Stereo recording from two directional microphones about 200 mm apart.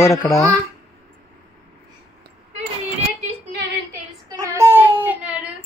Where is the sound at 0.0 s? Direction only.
15° left (ahead or behind).